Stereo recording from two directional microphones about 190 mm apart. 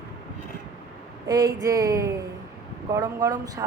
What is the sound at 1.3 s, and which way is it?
A woman's voice, 20° right (ahead or behind).